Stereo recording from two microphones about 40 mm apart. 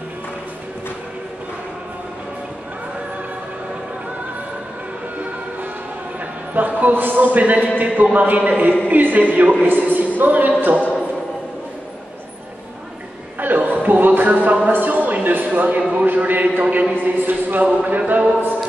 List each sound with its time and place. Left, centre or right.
6.5 s speech: right
7.3 s a man's voice: right
13.4 s a sound: right
13.8 s music: right
14.7 s a sound: right
17.0 s speech: right